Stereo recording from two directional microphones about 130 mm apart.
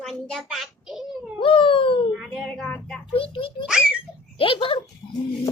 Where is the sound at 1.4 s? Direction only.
45° left (ahead or behind).